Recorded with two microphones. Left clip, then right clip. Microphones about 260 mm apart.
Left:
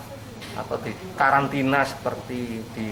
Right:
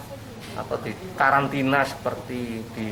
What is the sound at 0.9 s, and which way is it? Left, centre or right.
Speech, centre.